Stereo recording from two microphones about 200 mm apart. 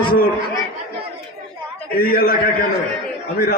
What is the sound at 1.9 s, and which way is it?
Speech, 45° left (ahead or behind).